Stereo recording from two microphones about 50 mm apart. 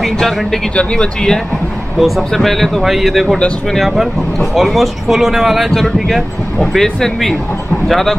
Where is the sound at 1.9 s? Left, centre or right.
Centre.